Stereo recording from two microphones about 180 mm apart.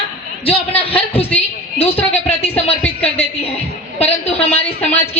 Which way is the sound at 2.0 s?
10° left (ahead or behind).